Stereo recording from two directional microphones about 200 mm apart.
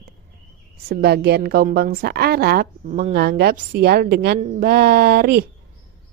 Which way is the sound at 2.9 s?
35° right (ahead or behind).